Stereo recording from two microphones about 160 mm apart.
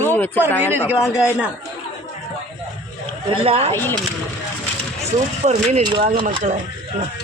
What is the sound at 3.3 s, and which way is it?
Speech, 40° right (ahead or behind).